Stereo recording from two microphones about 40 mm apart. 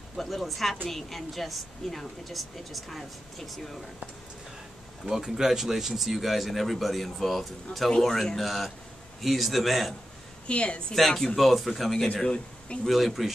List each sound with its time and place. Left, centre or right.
0.2 s a woman's voice: centre
5.0 s a woman's voice: centre
10.4 s a woman's voice: left
11.0 s a woman's voice: centre